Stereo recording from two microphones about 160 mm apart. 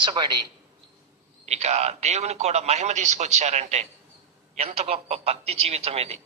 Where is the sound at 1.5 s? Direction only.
45° right (ahead or behind).